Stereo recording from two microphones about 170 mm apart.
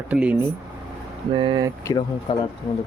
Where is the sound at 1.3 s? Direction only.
25° right (ahead or behind).